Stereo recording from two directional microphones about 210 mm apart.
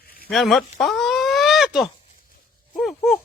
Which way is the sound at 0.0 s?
45° left (ahead or behind).